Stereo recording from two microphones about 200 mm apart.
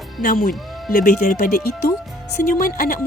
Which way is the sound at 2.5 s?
45° left (ahead or behind).